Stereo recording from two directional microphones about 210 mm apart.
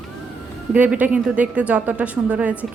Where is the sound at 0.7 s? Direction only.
5° right (ahead or behind).